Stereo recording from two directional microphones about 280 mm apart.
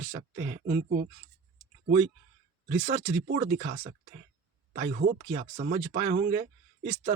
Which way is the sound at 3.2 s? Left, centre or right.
Right.